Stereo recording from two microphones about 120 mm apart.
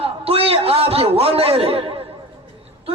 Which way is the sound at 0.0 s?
55° right (ahead or behind).